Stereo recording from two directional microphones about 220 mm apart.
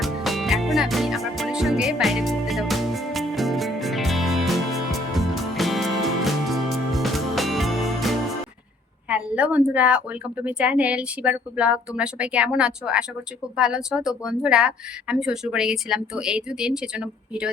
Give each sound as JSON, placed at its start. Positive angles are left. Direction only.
{"t": 0.0, "sound": "music", "side_deg": 0}
{"t": 9.0, "sound": "speech", "side_deg": -5}